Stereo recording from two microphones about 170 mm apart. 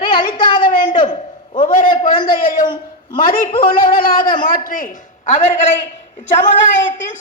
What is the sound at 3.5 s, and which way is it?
A man's voice, 55° left (ahead or behind).